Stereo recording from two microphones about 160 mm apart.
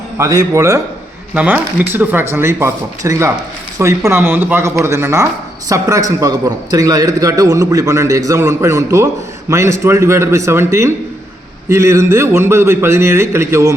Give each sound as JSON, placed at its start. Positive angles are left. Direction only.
{"t": 0.2, "sound": "a man's voice", "side_deg": -20}